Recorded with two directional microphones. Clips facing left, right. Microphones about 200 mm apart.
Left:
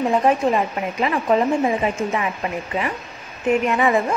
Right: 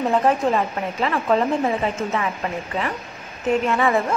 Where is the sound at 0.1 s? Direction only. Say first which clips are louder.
Even; 10° left (ahead or behind).